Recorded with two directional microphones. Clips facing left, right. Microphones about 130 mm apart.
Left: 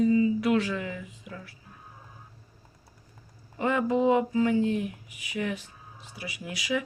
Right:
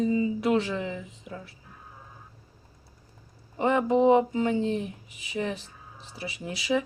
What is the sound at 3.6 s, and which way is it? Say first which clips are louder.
Speech: right 3 dB; 25° right (ahead or behind).